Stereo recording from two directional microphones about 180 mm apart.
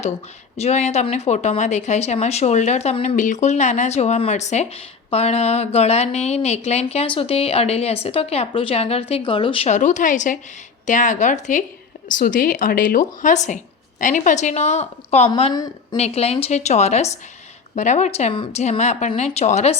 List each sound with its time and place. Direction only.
0.5 s a woman's voice: 35° left (ahead or behind)
15.5 s a woman's voice: 20° left (ahead or behind)
16.0 s speech: 35° left (ahead or behind)